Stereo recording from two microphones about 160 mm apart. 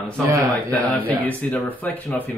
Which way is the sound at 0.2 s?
20° right (ahead or behind).